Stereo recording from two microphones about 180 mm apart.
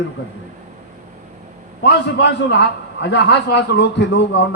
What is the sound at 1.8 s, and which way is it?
A man's voice, 70° left (ahead or behind).